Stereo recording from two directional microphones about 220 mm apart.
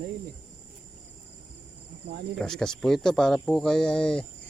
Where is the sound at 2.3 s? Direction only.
Centre (ahead or behind).